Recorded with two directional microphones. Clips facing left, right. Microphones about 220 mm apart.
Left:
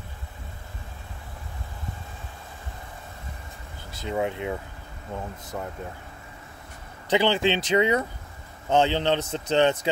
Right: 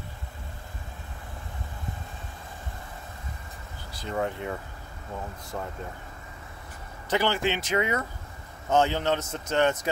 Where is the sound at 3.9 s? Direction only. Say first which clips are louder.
Left 2 dB; 15° left (ahead or behind).